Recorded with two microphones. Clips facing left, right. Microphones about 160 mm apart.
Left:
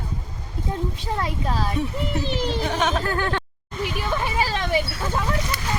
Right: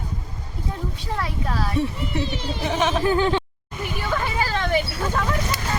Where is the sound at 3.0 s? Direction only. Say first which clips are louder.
Right 5 dB; 15° right (ahead or behind).